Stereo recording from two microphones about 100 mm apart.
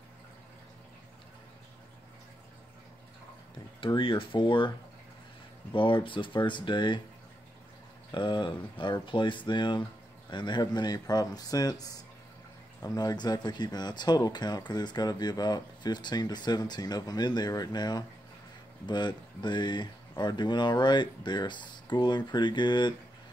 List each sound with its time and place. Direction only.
3.8 s speech: 60° left (ahead or behind)
8.1 s speech: 50° left (ahead or behind)